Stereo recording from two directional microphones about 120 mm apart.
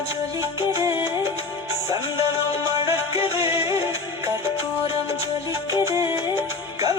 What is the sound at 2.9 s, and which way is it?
Music, 25° right (ahead or behind).